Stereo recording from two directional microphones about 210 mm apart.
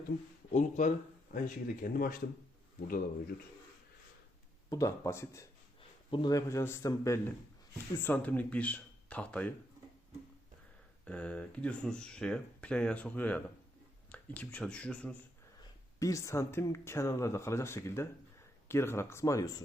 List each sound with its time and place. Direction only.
0.5 s speech: 35° left (ahead or behind)
4.7 s speech: 15° left (ahead or behind)
11.0 s speech: 5° left (ahead or behind)
16.0 s speech: 15° left (ahead or behind)